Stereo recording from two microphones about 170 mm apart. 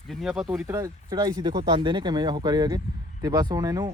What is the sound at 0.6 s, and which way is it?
Speech, 20° right (ahead or behind).